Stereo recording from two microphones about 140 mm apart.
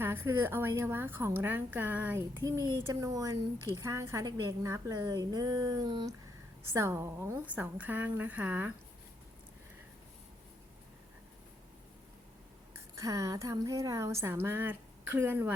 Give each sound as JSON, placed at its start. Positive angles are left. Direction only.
{"t": 0.0, "sound": "a woman's voice", "side_deg": -15}
{"t": 2.4, "sound": "a woman's voice", "side_deg": -25}
{"t": 13.0, "sound": "a woman's voice", "side_deg": -20}